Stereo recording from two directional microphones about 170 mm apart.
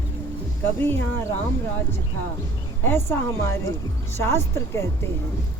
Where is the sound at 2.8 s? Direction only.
15° left (ahead or behind).